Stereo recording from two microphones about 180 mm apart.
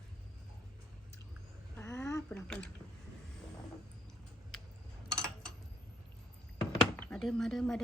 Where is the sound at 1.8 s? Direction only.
15° left (ahead or behind).